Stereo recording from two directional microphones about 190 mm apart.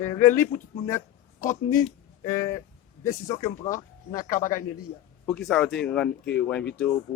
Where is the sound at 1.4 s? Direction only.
45° left (ahead or behind).